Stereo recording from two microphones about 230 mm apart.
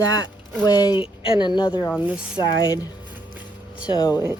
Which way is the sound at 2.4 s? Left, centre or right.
Centre.